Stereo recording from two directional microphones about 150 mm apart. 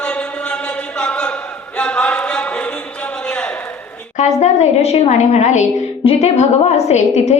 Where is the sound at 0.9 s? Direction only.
5° left (ahead or behind).